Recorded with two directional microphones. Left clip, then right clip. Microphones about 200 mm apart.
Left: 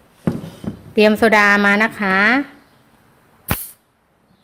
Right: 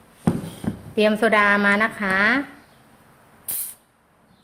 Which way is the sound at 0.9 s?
45° left (ahead or behind).